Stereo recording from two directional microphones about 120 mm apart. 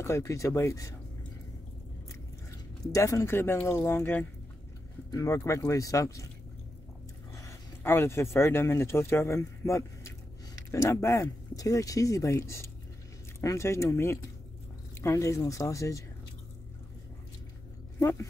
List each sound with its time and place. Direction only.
0.0 s speech: 25° left (ahead or behind)
2.9 s speech: 25° left (ahead or behind)
5.1 s speech: 25° left (ahead or behind)
7.3 s speech: 25° left (ahead or behind)
17.9 s speech: 25° left (ahead or behind)